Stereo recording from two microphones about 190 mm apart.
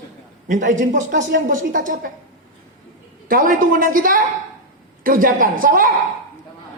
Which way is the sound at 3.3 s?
45° right (ahead or behind).